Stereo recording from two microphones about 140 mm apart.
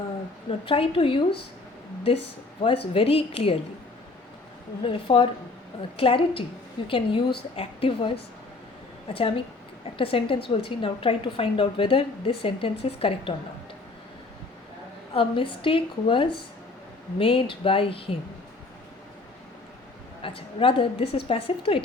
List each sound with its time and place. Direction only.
0.6 s a woman's voice: 40° left (ahead or behind)
2.6 s a woman's voice: 40° left (ahead or behind)
4.8 s a woman's voice: 40° left (ahead or behind)
15.1 s a woman's voice: 40° left (ahead or behind)
20.2 s a woman's voice: 40° left (ahead or behind)